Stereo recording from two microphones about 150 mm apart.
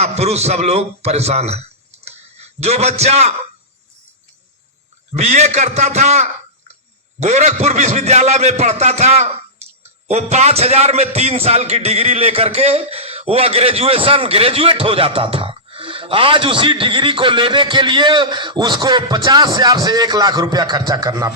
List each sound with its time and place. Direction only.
0.0 s a man's voice: 45° right (ahead or behind)
5.1 s a man's voice: 50° right (ahead or behind); by 21.3 s 25° right (ahead or behind)